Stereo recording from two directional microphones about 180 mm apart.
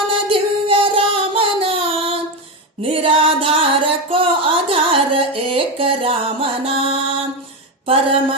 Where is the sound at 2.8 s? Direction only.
30° right (ahead or behind).